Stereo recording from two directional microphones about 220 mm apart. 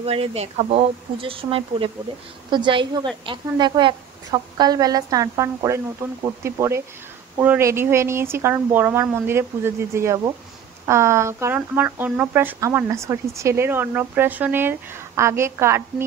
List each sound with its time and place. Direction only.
0.0 s speech: 25° right (ahead or behind)